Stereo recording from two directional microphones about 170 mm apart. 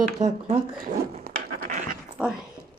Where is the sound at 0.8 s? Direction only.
60° right (ahead or behind).